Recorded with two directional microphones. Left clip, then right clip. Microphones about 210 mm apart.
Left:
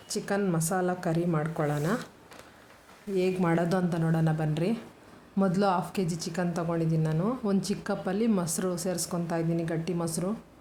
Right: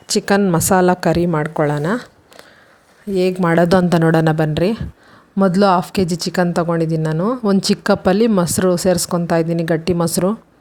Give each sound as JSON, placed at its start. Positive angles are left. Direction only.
{"t": 0.1, "sound": "speech", "side_deg": -40}
{"t": 3.2, "sound": "speech", "side_deg": -40}